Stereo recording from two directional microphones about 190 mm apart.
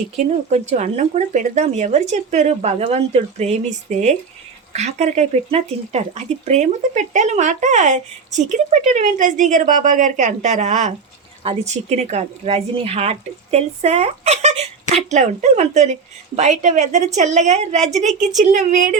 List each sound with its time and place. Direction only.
0.5 s speech: 35° right (ahead or behind)